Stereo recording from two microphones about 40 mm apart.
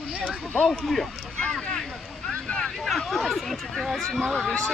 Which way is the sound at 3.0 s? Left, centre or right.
Centre.